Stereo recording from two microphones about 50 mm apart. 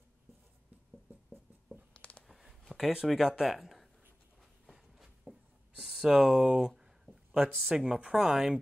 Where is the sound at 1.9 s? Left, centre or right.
Left.